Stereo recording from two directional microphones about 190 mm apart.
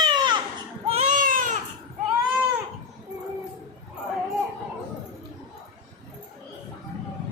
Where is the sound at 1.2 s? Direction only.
45° right (ahead or behind).